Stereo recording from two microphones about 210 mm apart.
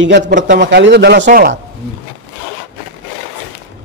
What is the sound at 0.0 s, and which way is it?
Speech, 60° right (ahead or behind).